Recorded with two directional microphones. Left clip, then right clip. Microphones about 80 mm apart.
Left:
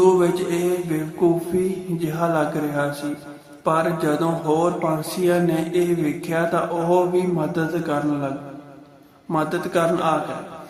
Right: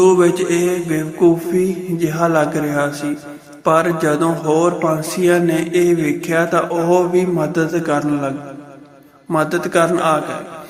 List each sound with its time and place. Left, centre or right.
0.0 s mantra: right
2.0 s speech: right
9.3 s speech: right